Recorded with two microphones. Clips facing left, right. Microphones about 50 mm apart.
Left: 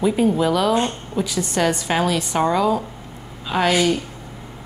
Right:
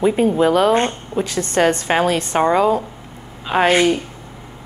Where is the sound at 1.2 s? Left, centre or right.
Right.